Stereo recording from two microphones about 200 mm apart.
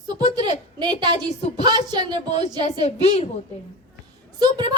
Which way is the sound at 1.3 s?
30° left (ahead or behind).